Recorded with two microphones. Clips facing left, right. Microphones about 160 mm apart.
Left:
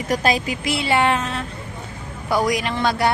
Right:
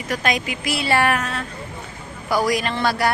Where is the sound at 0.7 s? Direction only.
20° left (ahead or behind).